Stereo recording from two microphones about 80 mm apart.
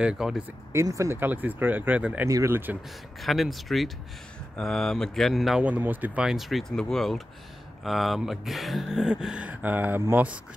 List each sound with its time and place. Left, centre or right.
0.0 s speech: centre
0.7 s speech: right
1.1 s speech: right
2.2 s speech: right
2.5 s speech: right
3.2 s speech: centre
5.6 s speech: centre
6.2 s speech: centre; by 10.2 s right